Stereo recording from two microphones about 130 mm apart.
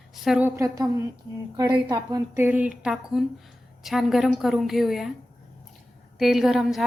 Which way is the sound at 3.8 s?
Centre (ahead or behind).